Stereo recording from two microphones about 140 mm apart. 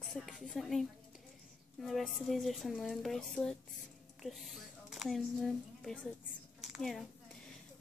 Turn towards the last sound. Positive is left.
turn(degrees=0)  # may be behind; listen again after turning